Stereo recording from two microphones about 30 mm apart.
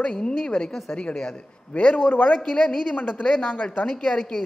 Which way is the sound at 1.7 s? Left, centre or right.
Left.